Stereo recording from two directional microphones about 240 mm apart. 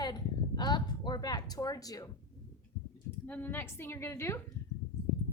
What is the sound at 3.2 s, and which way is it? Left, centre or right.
A woman's voice, centre.